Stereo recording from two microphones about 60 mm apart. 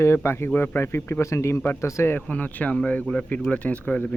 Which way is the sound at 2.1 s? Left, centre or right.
Left.